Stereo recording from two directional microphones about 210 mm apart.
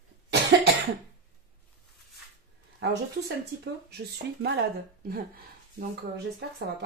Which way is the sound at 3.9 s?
50° right (ahead or behind).